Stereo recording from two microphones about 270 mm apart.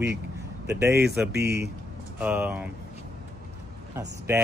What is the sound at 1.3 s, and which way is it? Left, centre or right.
Speech, right.